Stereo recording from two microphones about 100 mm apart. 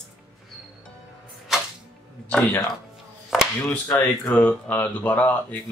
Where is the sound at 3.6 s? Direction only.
20° left (ahead or behind).